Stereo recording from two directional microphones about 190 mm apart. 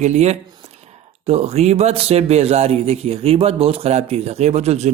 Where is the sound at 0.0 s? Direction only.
35° right (ahead or behind).